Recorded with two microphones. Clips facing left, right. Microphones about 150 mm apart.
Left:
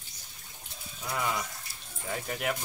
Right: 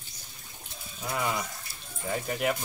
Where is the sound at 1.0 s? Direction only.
10° right (ahead or behind).